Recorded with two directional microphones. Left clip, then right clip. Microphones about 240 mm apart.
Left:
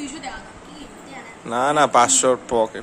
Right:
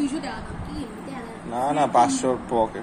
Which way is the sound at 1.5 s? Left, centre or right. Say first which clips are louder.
Left 4 dB; left.